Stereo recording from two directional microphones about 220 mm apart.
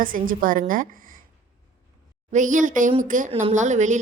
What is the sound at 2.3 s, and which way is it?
A woman's voice, 35° right (ahead or behind).